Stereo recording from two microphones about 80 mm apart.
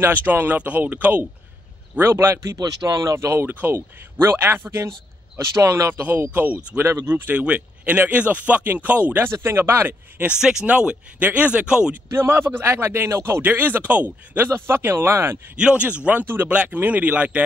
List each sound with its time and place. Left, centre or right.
0.0 s speech: right
2.0 s speech: right
7.3 s speech: centre
9.2 s speech: right
10.3 s speech: centre
11.9 s speech: right
15.5 s speech: centre